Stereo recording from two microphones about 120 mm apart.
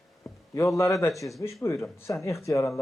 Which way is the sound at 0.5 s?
25° left (ahead or behind).